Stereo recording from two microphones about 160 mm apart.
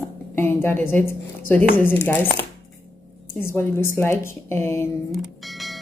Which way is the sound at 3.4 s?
15° left (ahead or behind).